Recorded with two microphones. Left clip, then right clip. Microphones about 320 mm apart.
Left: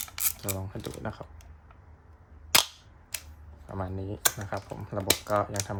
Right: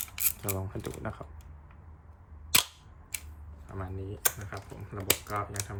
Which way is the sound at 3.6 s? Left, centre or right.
Centre.